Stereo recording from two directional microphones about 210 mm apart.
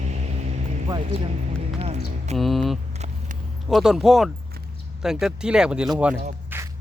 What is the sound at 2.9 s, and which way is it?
Vehicle, 30° right (ahead or behind).